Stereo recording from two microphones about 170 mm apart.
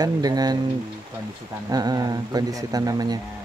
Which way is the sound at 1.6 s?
25° right (ahead or behind).